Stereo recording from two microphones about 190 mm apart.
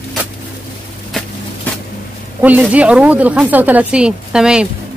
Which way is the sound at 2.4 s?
10° right (ahead or behind).